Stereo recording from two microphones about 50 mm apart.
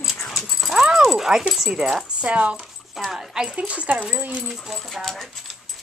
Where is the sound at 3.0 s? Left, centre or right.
Centre.